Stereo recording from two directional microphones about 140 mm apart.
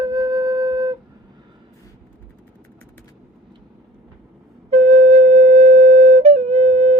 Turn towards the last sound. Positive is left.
turn(degrees=-50)  # may be behind; listen again after turning